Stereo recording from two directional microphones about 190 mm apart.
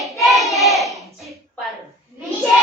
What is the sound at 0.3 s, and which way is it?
Hands, centre (ahead or behind).